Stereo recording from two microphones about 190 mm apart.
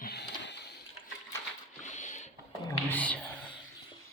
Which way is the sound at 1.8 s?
40° left (ahead or behind).